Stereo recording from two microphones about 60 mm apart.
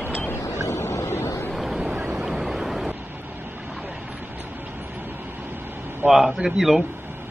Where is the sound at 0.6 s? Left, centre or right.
Left.